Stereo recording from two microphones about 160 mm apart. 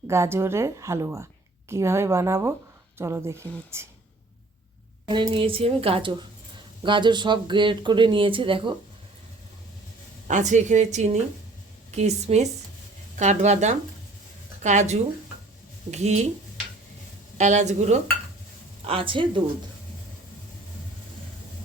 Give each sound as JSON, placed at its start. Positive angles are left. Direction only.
{"t": 0.1, "sound": "a woman's voice", "side_deg": -15}
{"t": 5.0, "sound": "speech", "side_deg": -30}
{"t": 10.2, "sound": "a woman's voice", "side_deg": -50}
{"t": 17.3, "sound": "a woman's voice", "side_deg": -50}
{"t": 18.9, "sound": "speech", "side_deg": -35}